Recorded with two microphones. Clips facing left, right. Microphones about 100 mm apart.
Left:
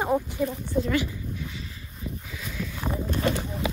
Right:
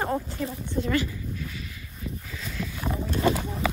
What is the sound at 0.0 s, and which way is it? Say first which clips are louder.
Speech: left 3 dB; 10° left (ahead or behind).